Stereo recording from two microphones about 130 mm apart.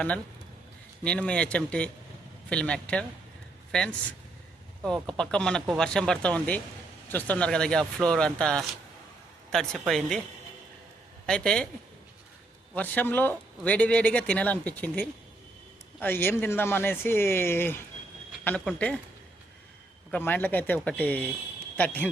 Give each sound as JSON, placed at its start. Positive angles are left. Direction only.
{"t": 1.0, "sound": "a man's voice", "side_deg": 10}
{"t": 5.0, "sound": "a man's voice", "side_deg": 5}
{"t": 11.3, "sound": "a man's voice", "side_deg": 5}
{"t": 12.7, "sound": "a man's voice", "side_deg": 15}
{"t": 20.1, "sound": "a man's voice", "side_deg": 15}